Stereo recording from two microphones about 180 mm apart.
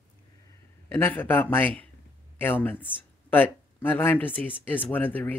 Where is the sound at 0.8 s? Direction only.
10° left (ahead or behind).